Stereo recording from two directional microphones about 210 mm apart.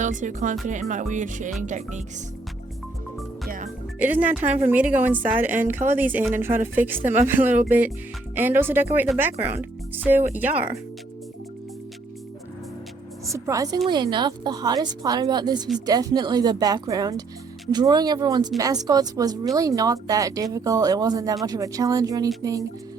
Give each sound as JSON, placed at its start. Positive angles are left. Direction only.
{"t": 0.0, "sound": "music", "side_deg": -35}
{"t": 3.9, "sound": "speech", "side_deg": -10}
{"t": 13.3, "sound": "a woman's voice", "side_deg": -15}